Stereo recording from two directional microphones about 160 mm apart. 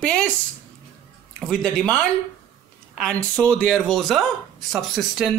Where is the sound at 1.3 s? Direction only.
Centre (ahead or behind).